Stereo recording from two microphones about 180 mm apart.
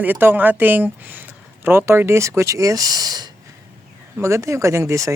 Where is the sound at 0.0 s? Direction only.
10° right (ahead or behind).